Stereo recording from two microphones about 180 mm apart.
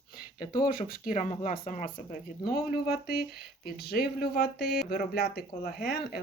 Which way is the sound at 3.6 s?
60° left (ahead or behind).